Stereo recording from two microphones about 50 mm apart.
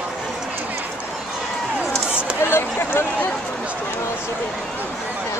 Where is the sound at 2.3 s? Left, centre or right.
Left.